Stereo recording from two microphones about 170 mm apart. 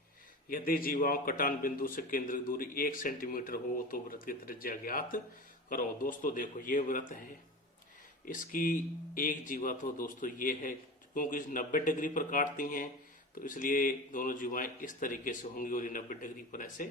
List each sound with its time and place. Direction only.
0.5 s a man's voice: 55° left (ahead or behind)
8.2 s speech: 55° left (ahead or behind)